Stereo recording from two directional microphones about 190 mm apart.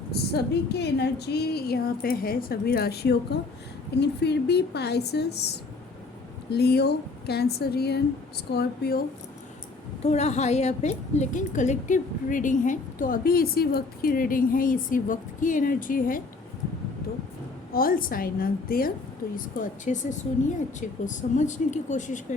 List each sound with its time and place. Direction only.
0.1 s a woman's voice: 60° left (ahead or behind)
10.0 s a woman's voice: 35° left (ahead or behind)
17.7 s a woman's voice: 50° left (ahead or behind)